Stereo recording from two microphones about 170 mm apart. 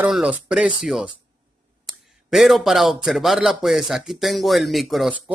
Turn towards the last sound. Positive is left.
turn(degrees=0)  # may be behind; listen again after turning